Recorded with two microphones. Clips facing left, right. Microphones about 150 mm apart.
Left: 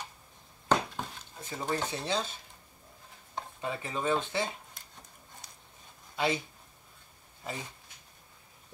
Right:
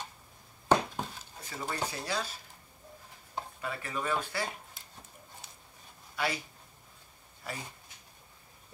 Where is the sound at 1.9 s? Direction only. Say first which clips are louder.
Left 3 dB; 25° left (ahead or behind).